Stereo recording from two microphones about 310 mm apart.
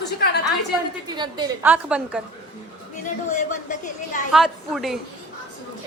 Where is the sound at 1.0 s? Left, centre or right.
Centre.